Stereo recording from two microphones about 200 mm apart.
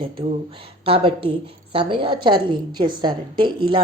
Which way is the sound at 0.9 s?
25° right (ahead or behind).